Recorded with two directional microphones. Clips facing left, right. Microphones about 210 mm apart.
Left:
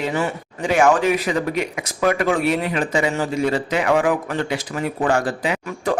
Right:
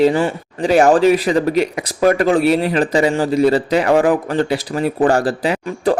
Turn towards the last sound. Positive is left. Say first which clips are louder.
# right 5 dB
turn(degrees=-35)  # may be behind; listen again after turning